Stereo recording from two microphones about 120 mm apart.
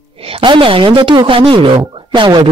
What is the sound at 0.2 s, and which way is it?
A woman's voice, 50° right (ahead or behind).